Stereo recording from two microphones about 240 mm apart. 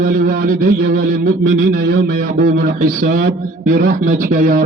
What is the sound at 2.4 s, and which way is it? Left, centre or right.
A man's voice, right.